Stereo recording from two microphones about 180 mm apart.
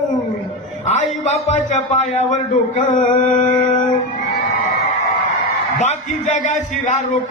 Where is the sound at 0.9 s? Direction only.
40° left (ahead or behind).